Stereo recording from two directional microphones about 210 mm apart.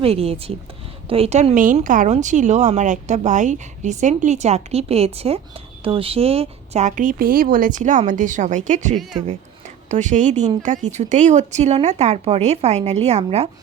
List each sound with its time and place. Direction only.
0.0 s speech: 30° right (ahead or behind)